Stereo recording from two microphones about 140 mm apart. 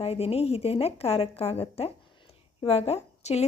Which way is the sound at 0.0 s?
45° left (ahead or behind).